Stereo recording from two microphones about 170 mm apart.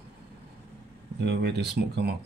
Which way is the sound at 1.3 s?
75° right (ahead or behind).